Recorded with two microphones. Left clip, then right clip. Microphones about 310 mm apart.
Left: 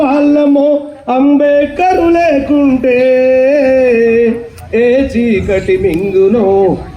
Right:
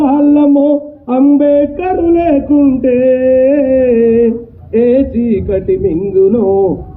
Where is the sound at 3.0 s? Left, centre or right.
Left.